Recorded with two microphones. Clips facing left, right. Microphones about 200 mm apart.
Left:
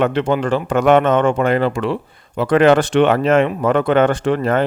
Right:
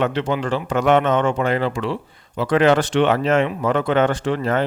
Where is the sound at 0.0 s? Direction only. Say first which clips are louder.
Left 4 dB; 55° left (ahead or behind).